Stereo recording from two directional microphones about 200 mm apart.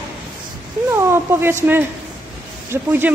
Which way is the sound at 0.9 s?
10° right (ahead or behind).